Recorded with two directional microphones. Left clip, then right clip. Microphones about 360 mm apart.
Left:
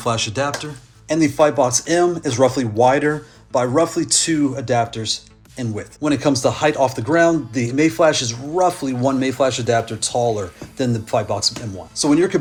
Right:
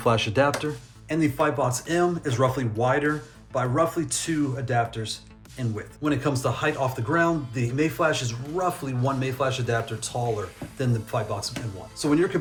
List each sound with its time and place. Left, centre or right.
0.0 s speech: centre
1.0 s speech: centre